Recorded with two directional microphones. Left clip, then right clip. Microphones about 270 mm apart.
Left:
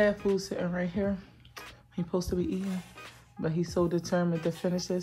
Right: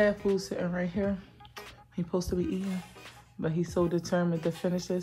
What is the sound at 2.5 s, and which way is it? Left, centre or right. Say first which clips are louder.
Speech: even; centre.